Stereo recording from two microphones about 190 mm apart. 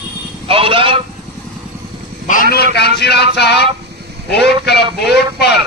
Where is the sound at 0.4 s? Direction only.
30° right (ahead or behind).